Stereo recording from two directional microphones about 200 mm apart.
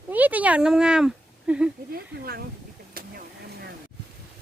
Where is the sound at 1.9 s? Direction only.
50° right (ahead or behind).